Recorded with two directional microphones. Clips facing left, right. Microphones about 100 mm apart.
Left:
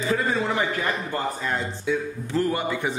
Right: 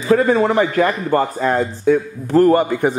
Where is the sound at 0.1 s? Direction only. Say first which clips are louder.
Right 12 dB; 55° right (ahead or behind).